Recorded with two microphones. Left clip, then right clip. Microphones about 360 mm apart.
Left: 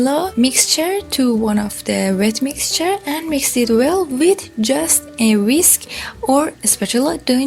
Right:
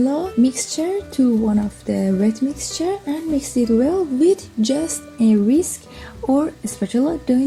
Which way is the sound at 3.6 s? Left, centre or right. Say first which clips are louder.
Left 3 dB; left.